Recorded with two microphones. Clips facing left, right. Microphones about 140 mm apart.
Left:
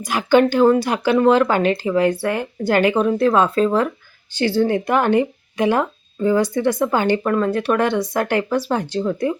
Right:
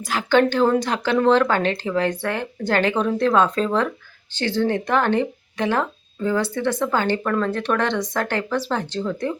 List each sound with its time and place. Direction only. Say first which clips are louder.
0.0 s speech: left 3 dB; 15° left (ahead or behind)